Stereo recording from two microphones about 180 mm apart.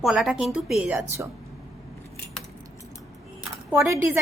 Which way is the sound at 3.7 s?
15° right (ahead or behind).